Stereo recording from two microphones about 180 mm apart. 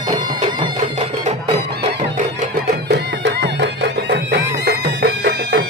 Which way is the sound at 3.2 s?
75° right (ahead or behind).